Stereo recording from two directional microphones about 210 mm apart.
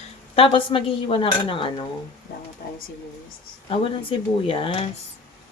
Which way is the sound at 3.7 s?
25° left (ahead or behind).